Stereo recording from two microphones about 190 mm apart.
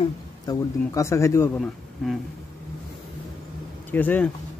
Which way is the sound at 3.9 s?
10° left (ahead or behind).